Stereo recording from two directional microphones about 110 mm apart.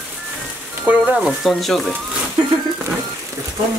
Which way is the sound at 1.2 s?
Centre (ahead or behind).